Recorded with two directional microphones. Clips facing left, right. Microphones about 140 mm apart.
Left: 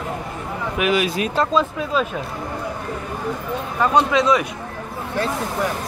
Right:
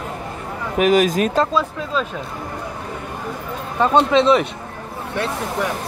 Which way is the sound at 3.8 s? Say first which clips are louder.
Right 3 dB; 25° right (ahead or behind).